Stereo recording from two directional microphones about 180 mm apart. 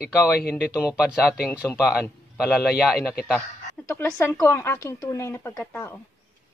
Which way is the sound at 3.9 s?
10° left (ahead or behind).